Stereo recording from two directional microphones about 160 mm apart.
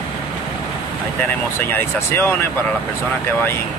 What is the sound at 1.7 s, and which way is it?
Speech, 15° left (ahead or behind).